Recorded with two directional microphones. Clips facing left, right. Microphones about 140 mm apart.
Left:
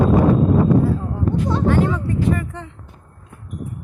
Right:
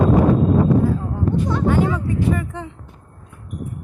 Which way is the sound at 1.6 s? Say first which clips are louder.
Even; centre (ahead or behind).